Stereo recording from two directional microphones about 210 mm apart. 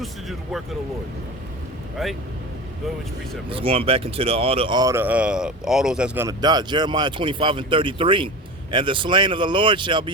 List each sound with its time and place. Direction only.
0.0 s speech: centre (ahead or behind)
2.0 s speech: centre (ahead or behind)
3.5 s speech: 25° right (ahead or behind); by 6.2 s 5° right (ahead or behind)
6.2 s speech: 20° right (ahead or behind)